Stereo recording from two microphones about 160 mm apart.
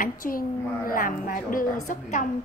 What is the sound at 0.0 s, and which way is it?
A woman's voice, 65° left (ahead or behind).